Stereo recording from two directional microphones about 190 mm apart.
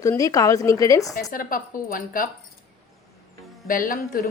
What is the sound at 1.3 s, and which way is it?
Speech, 50° left (ahead or behind).